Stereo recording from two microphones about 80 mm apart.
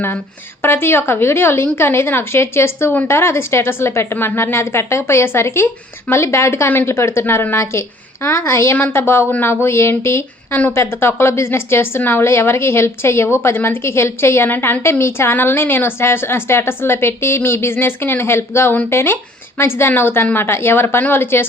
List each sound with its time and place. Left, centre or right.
0.6 s a woman's voice: left